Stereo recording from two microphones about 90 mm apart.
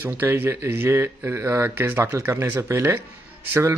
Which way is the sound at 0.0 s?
20° right (ahead or behind).